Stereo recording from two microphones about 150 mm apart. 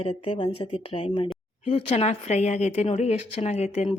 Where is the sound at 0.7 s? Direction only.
40° left (ahead or behind).